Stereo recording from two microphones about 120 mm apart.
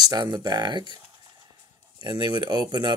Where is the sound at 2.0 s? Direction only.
40° right (ahead or behind).